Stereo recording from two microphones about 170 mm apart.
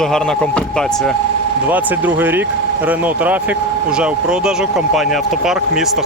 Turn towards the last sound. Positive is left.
turn(degrees=0)  # may be behind; listen again after turning